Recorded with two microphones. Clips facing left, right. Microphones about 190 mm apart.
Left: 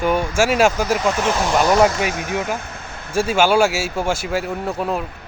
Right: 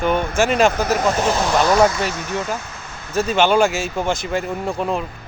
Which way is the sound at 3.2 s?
10° left (ahead or behind).